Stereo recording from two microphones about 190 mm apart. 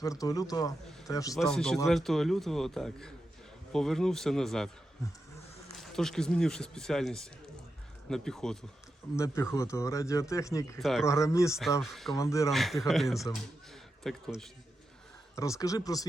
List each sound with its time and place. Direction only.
0.0 s a man's voice: 20° left (ahead or behind)
1.4 s speech: 5° left (ahead or behind)
5.7 s speech: centre (ahead or behind)
9.1 s speech: 15° left (ahead or behind)
10.8 s speech: centre (ahead or behind)
11.0 s speech: 15° left (ahead or behind)
11.8 s speech: centre (ahead or behind)
12.1 s speech: 15° left (ahead or behind)
12.5 s speech: centre (ahead or behind)
15.4 s speech: 15° left (ahead or behind)